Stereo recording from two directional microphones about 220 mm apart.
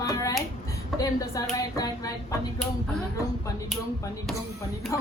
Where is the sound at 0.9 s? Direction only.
15° left (ahead or behind).